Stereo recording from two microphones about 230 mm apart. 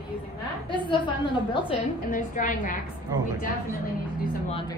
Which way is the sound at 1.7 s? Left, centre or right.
Left.